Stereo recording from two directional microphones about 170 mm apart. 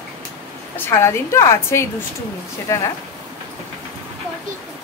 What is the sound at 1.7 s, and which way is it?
A woman's voice, 15° left (ahead or behind).